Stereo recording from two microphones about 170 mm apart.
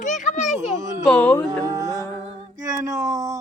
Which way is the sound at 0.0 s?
45° left (ahead or behind).